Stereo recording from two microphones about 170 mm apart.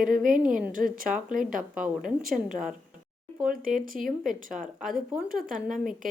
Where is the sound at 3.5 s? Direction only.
55° right (ahead or behind).